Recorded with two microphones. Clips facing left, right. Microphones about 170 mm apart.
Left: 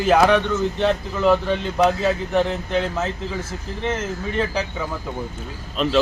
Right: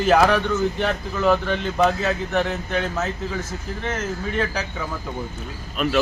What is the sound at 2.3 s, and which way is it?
Speech, 30° left (ahead or behind).